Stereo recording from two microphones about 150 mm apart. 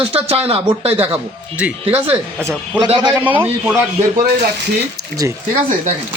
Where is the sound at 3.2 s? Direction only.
10° right (ahead or behind).